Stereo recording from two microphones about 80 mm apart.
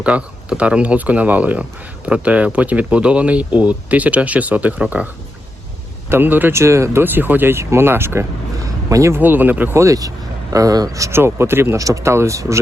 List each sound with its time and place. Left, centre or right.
0.0 s speech: centre
6.1 s speech: right
8.6 s a sound: right
9.1 s speech: right
9.7 s speech: right
11.2 s speech: right
11.8 s speech: right